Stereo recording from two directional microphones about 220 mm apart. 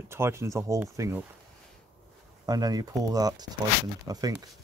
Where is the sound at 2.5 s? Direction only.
15° right (ahead or behind).